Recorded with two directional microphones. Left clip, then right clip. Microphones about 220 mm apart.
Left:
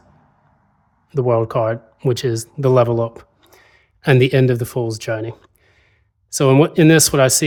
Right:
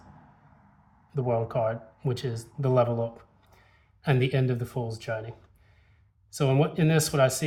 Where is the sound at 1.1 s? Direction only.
50° left (ahead or behind).